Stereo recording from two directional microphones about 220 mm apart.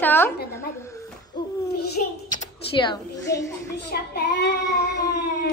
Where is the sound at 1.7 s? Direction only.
45° left (ahead or behind).